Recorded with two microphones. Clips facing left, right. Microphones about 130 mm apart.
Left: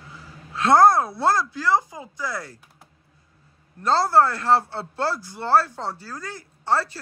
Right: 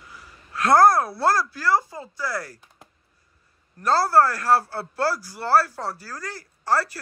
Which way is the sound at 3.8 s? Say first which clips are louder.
Even; 20° left (ahead or behind).